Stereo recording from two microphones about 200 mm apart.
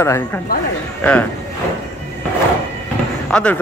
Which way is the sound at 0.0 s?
15° left (ahead or behind).